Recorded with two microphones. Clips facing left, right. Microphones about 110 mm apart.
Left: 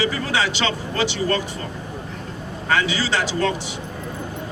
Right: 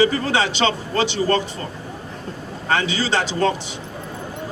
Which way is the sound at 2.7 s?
30° right (ahead or behind).